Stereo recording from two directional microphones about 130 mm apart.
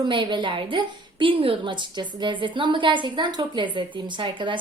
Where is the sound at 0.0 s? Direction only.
40° right (ahead or behind).